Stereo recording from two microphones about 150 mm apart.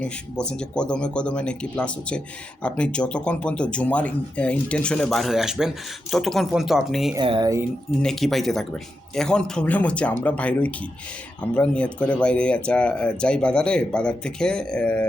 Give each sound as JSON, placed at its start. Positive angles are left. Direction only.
{"t": 0.0, "sound": "speech", "side_deg": 5}
{"t": 7.2, "sound": "speech", "side_deg": -30}
{"t": 7.9, "sound": "speech", "side_deg": 5}